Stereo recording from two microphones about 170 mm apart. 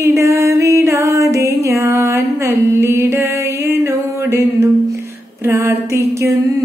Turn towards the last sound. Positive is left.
turn(degrees=-15)  # may be behind; listen again after turning